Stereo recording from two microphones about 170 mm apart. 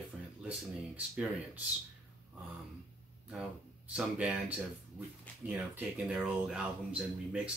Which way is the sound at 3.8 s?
5° right (ahead or behind).